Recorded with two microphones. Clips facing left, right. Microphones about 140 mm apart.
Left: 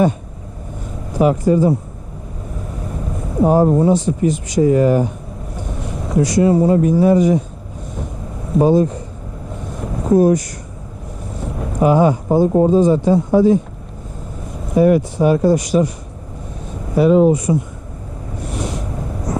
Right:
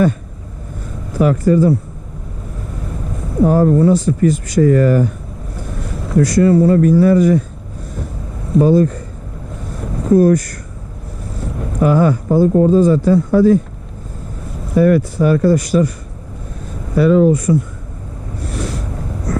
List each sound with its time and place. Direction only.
1.2 s speech: 15° left (ahead or behind)
3.5 s speech: 15° left (ahead or behind)
6.1 s speech: 15° left (ahead or behind)
8.6 s speech: 10° left (ahead or behind)
10.1 s speech: 15° left (ahead or behind)
11.4 s speech: 5° left (ahead or behind)
14.8 s speech: 10° left (ahead or behind)
16.9 s speech: 10° left (ahead or behind)
18.4 s a sound: 15° left (ahead or behind)